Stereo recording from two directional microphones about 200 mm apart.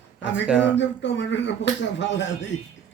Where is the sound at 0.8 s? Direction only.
65° left (ahead or behind).